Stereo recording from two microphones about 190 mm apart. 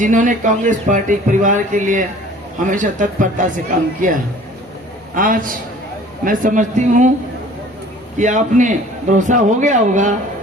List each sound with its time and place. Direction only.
0.0 s a man's voice: 45° right (ahead or behind)
8.2 s a man's voice: 40° right (ahead or behind)